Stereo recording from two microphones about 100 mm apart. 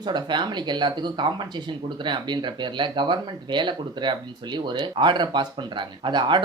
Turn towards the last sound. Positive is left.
turn(degrees=-50)  # may be behind; listen again after turning